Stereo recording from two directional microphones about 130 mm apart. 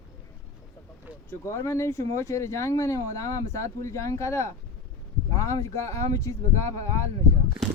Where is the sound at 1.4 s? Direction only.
20° left (ahead or behind).